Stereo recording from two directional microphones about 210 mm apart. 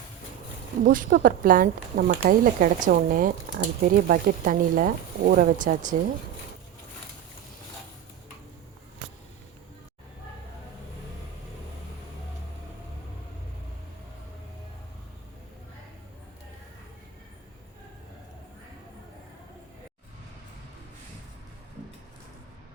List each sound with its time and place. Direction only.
0.9 s speech: 40° right (ahead or behind)